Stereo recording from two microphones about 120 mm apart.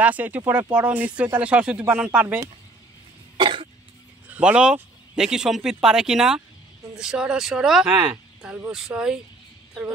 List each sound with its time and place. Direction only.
0.0 s speech: 15° right (ahead or behind)
3.3 s cough: 45° right (ahead or behind)
4.3 s speech: 10° right (ahead or behind)